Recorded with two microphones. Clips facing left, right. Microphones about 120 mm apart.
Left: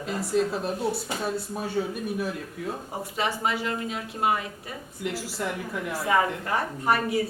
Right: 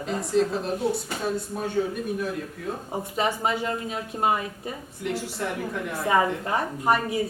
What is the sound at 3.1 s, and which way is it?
A woman's voice, 25° right (ahead or behind).